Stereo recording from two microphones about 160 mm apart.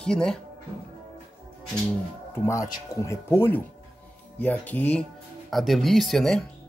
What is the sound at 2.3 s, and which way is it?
Speech, 20° left (ahead or behind).